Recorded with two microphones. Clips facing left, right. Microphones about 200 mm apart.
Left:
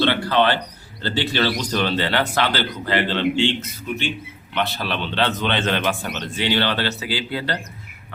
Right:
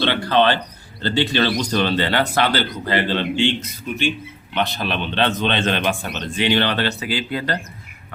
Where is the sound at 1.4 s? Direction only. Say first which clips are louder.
Even; 20° right (ahead or behind).